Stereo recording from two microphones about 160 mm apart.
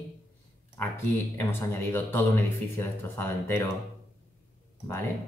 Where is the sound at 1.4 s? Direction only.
15° left (ahead or behind).